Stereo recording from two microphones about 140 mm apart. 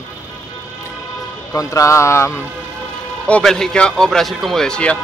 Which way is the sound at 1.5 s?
25° left (ahead or behind).